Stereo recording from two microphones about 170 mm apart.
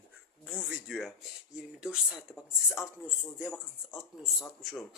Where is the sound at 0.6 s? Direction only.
Centre (ahead or behind).